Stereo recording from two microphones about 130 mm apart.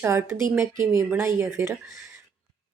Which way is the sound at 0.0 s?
20° right (ahead or behind).